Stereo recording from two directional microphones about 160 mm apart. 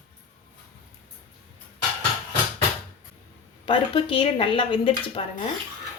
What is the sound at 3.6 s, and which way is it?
A woman's voice, 35° left (ahead or behind).